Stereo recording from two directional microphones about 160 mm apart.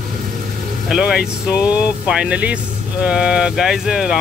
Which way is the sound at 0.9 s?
5° right (ahead or behind).